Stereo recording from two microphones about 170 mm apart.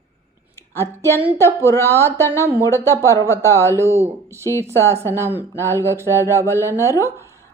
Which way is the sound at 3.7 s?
15° right (ahead or behind).